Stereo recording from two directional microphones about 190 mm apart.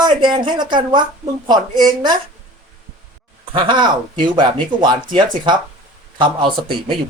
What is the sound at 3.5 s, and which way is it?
Speech, 25° right (ahead or behind).